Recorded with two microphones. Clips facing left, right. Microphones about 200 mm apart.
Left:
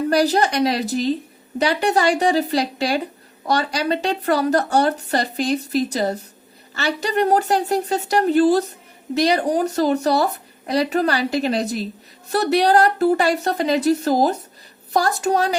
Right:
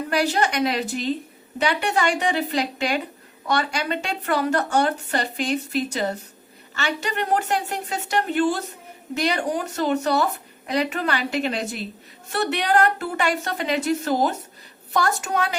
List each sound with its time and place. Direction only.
0.1 s speech: 35° left (ahead or behind)